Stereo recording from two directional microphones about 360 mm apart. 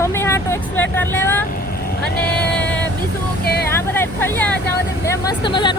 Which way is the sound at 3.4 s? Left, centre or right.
Left.